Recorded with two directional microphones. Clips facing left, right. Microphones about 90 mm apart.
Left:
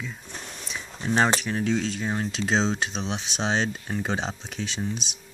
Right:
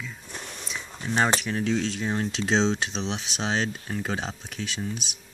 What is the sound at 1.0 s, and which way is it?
Speech, 15° left (ahead or behind).